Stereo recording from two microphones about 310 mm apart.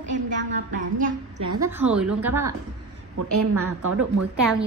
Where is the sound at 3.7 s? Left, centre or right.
Right.